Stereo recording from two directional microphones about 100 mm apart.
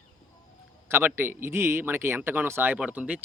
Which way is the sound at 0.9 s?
20° right (ahead or behind).